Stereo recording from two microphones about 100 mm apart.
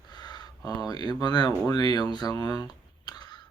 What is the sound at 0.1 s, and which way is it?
Speech, 45° left (ahead or behind).